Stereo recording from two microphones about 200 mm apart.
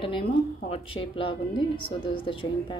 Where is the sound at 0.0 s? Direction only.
25° left (ahead or behind).